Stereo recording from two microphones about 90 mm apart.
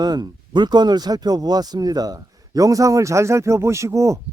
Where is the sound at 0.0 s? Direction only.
50° right (ahead or behind).